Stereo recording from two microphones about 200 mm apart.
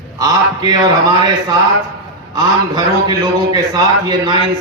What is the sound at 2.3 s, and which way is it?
A man's voice, 20° right (ahead or behind).